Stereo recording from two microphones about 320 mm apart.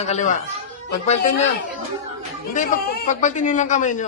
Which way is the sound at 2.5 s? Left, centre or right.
Left.